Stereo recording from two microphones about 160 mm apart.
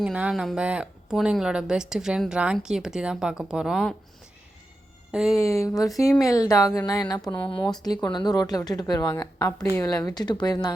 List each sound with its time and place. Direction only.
0.0 s speech: 5° right (ahead or behind)
5.3 s speech: 20° left (ahead or behind)